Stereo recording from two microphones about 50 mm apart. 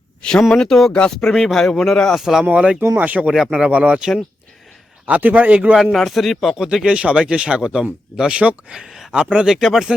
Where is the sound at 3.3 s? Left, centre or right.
Centre.